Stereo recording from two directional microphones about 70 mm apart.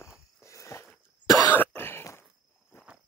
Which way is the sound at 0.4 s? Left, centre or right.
Left.